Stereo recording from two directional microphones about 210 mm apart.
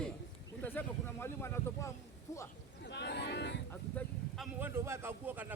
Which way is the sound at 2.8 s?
55° left (ahead or behind).